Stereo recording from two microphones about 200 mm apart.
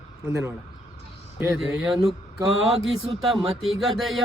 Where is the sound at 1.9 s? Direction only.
15° right (ahead or behind).